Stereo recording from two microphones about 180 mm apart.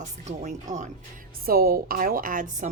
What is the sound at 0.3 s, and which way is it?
Speech, 40° right (ahead or behind).